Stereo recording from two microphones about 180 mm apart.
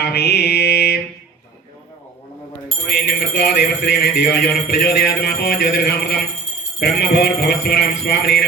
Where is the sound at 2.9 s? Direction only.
65° left (ahead or behind).